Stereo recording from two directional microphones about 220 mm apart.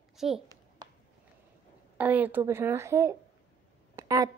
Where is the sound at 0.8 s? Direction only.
20° right (ahead or behind).